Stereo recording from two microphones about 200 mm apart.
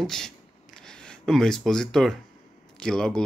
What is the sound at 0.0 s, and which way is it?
Speech, centre (ahead or behind).